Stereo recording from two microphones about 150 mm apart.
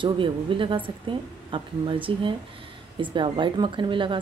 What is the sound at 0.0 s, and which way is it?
Speech, 35° right (ahead or behind).